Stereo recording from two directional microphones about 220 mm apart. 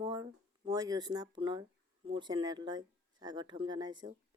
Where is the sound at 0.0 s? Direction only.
15° right (ahead or behind).